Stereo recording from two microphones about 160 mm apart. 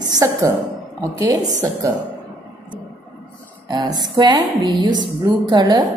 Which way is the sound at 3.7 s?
25° right (ahead or behind).